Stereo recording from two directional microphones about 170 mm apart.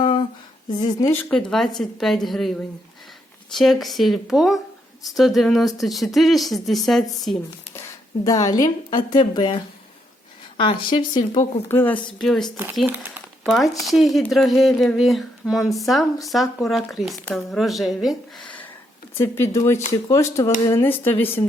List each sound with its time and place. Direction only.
0.0 s a sound: 30° left (ahead or behind)
0.7 s speech: 25° left (ahead or behind)
1.1 s speech: 5° left (ahead or behind)
3.5 s speech: centre (ahead or behind)
7.7 s a woman's voice: 15° left (ahead or behind)
11.7 s speech: 10° left (ahead or behind)
12.2 s speech: centre (ahead or behind)
12.8 s speech: 10° right (ahead or behind)
19.1 s speech: 15° left (ahead or behind)